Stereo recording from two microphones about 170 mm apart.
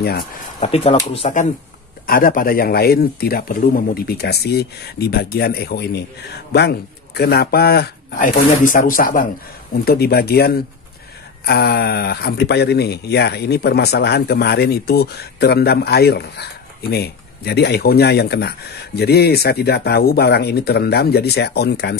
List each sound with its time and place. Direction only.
0.0 s speech: 65° left (ahead or behind)
0.6 s speech: 35° left (ahead or behind)
2.0 s speech: 60° left (ahead or behind)
9.8 s speech: 65° left (ahead or behind)